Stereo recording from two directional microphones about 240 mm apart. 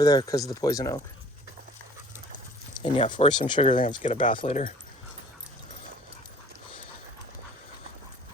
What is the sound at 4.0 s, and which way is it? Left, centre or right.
Speech, left.